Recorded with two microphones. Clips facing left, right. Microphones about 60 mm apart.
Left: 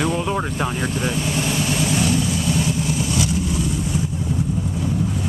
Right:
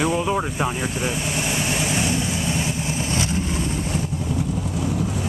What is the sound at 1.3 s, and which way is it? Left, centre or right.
Vehicle, centre.